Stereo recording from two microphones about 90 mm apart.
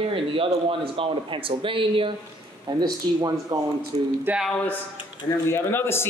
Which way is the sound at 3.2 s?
45° right (ahead or behind).